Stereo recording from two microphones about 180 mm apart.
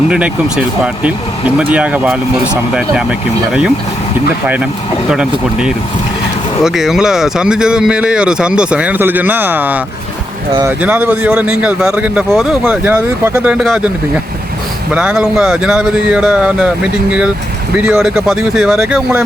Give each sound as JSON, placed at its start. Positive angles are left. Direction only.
{"t": 0.1, "sound": "a man's voice", "side_deg": -5}
{"t": 10.5, "sound": "speech", "side_deg": -20}
{"t": 10.8, "sound": "a man's voice", "side_deg": -10}
{"t": 14.9, "sound": "speech", "side_deg": -5}